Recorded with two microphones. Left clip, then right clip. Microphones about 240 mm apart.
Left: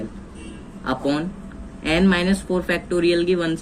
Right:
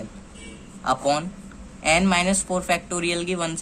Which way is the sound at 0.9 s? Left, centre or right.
Right.